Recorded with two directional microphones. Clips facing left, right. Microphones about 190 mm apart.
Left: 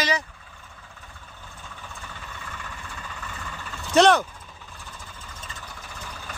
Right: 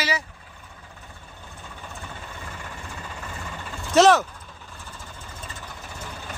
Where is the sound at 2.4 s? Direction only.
30° right (ahead or behind).